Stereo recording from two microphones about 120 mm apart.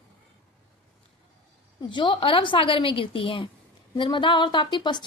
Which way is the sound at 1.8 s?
40° left (ahead or behind).